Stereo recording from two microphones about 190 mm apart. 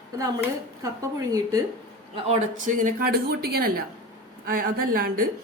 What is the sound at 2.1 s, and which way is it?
A woman's voice, 35° right (ahead or behind).